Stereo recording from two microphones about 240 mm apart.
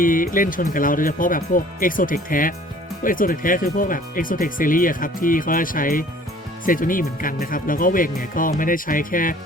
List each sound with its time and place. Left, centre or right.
0.0 s speech: left